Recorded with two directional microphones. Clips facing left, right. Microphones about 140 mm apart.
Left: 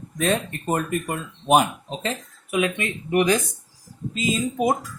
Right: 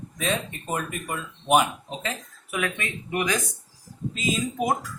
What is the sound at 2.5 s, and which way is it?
Speech, 20° left (ahead or behind).